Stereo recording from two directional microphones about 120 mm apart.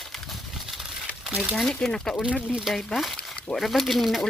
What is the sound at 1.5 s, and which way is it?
Speech, 5° left (ahead or behind).